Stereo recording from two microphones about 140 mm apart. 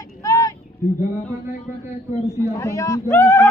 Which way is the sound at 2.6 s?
20° left (ahead or behind).